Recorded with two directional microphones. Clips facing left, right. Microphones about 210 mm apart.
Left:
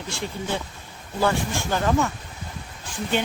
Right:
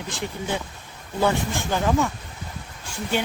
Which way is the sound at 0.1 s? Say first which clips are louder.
Even; 15° right (ahead or behind).